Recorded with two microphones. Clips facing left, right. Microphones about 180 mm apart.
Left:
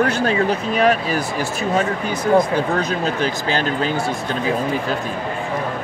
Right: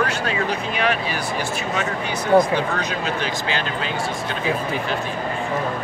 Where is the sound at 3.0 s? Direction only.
40° left (ahead or behind).